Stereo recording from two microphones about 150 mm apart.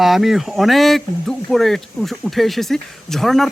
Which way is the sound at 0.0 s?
Centre (ahead or behind).